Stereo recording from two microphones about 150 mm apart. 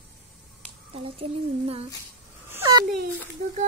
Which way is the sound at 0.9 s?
40° right (ahead or behind).